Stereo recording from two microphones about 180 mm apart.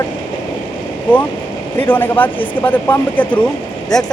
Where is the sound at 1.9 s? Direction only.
10° left (ahead or behind).